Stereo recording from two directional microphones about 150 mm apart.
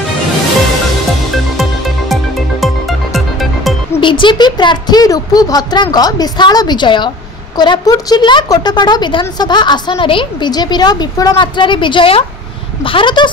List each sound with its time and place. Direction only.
2.6 s music: centre (ahead or behind)
3.9 s a woman's voice: 35° left (ahead or behind)